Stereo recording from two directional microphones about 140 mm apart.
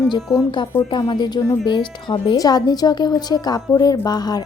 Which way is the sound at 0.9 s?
30° left (ahead or behind).